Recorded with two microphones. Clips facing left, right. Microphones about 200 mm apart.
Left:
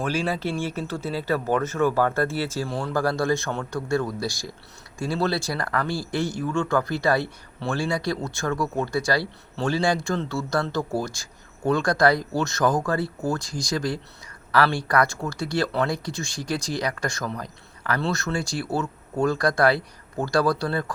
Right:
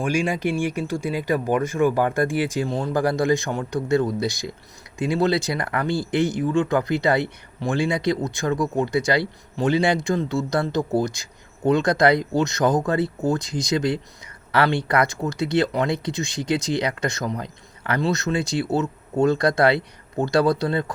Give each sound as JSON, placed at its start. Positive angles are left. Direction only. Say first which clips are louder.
{"t": 0.0, "sound": "speech", "louder": "right 3 dB", "side_deg": -15}